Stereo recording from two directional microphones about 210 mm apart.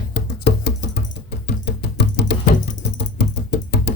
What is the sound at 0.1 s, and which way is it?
Music, 55° left (ahead or behind).